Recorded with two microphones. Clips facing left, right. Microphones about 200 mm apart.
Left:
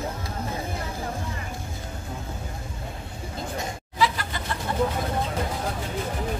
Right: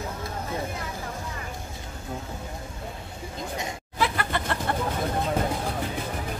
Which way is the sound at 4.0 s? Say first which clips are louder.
Left 1 dB; 60° right (ahead or behind).